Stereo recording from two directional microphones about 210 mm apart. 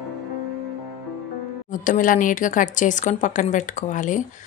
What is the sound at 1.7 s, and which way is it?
A woman's voice, 40° left (ahead or behind).